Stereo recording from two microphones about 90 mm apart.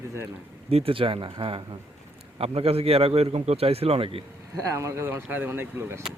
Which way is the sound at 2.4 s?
90° right.